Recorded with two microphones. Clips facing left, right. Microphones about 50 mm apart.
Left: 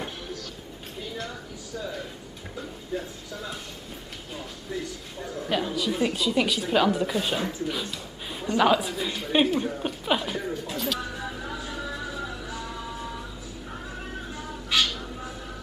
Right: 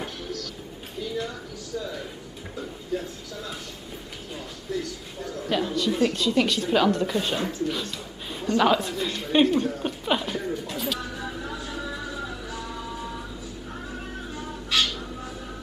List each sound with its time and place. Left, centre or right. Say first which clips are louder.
2.9 s a woman's voice: right 2 dB; centre
4.7 s speech: right 2 dB; centre
5.5 s a woman's voice: right 2 dB; centre
7.6 s a sound: right 2 dB; centre
8.5 s chuckle: even; centre
14.3 s bird: even; centre